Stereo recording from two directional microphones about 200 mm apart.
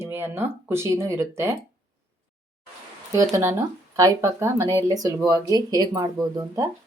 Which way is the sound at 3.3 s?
15° right (ahead or behind).